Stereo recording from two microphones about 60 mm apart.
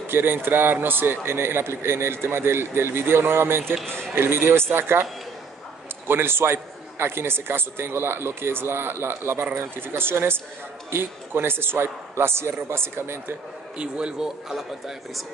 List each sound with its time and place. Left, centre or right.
0.0 s a man's voice: right
6.0 s a man's voice: right
13.7 s a man's voice: centre